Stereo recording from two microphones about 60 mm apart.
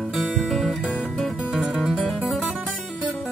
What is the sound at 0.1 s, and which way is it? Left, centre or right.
Music, centre.